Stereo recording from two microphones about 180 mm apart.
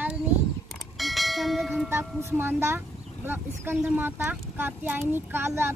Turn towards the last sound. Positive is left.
turn(degrees=-15)  # may be behind; listen again after turning